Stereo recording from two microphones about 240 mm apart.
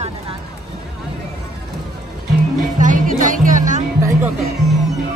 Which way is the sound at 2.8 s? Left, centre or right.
Right.